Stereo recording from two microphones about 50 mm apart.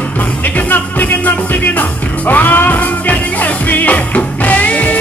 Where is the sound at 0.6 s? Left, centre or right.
Left.